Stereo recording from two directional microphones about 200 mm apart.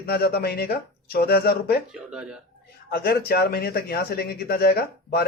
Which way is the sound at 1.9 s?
5° right (ahead or behind).